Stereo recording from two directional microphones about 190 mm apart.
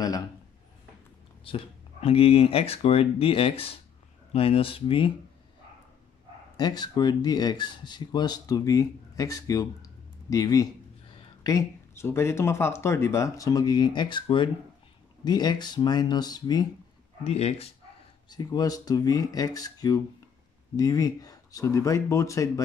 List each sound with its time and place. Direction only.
1.4 s speech: 30° left (ahead or behind)
6.5 s speech: 20° left (ahead or behind)
17.2 s speech: 35° left (ahead or behind)
18.3 s speech: 20° left (ahead or behind)